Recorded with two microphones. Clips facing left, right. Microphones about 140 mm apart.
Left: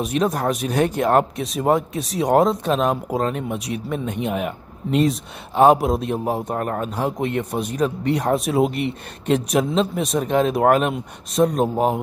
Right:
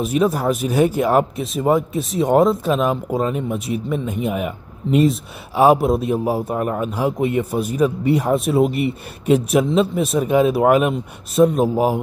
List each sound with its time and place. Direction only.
0.0 s speech: 5° right (ahead or behind)